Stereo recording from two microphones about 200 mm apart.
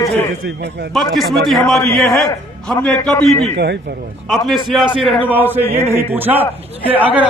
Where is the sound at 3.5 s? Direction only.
55° right (ahead or behind).